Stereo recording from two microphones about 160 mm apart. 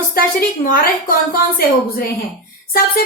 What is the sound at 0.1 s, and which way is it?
A woman's voice, 60° left (ahead or behind).